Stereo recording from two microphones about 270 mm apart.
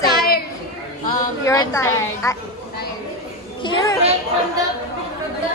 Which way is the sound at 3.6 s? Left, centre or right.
Centre.